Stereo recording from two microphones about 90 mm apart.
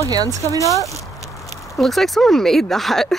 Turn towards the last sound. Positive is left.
turn(degrees=0)  # may be behind; listen again after turning